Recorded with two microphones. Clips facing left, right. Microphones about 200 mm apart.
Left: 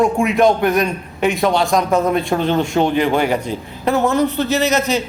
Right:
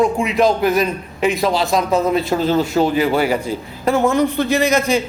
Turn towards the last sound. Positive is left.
turn(degrees=-10)  # may be behind; listen again after turning